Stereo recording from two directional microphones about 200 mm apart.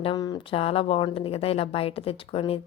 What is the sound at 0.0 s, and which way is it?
A woman's voice, 20° left (ahead or behind).